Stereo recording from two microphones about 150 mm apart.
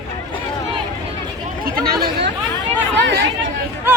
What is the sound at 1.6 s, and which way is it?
Chatter, 75° right (ahead or behind).